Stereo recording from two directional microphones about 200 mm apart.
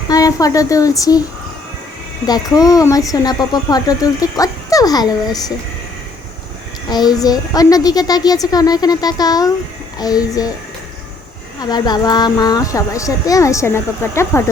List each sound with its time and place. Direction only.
0.1 s speech: 15° left (ahead or behind)
2.2 s speech: 20° left (ahead or behind)
6.9 s a woman's voice: 20° left (ahead or behind)
11.6 s speech: 20° left (ahead or behind)